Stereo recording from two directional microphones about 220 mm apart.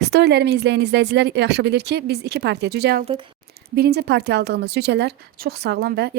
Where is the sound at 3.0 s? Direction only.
25° right (ahead or behind).